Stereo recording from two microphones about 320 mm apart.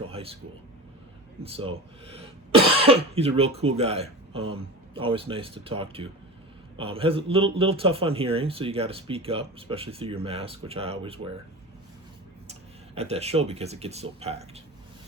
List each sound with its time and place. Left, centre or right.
0.1 s air conditioning: centre
1.4 s a man's voice: centre
12.5 s speech: centre